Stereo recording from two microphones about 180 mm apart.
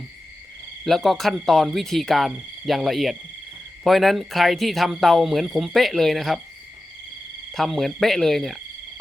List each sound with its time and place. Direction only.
0.9 s speech: centre (ahead or behind)
7.5 s speech: centre (ahead or behind)